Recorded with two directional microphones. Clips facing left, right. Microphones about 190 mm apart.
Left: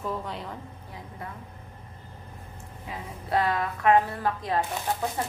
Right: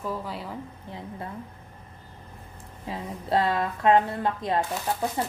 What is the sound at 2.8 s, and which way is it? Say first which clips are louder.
Speech: right 4 dB; 25° right (ahead or behind).